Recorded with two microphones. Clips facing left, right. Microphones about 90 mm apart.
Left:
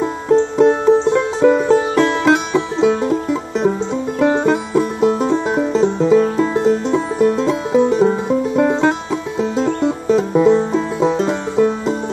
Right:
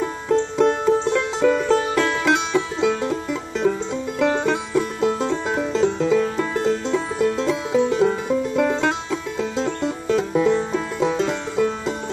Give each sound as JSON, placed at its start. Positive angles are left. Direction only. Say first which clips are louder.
{"t": 0.6, "sound": "music", "louder": "left 5 dB", "side_deg": 20}
{"t": 7.3, "sound": "music", "louder": "left 5 dB", "side_deg": 35}
{"t": 7.9, "sound": "music", "louder": "left 4 dB", "side_deg": 25}